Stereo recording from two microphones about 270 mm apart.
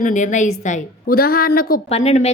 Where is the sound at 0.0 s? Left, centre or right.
Left.